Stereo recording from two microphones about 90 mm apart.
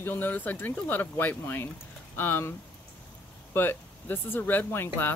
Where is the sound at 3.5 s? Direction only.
25° left (ahead or behind).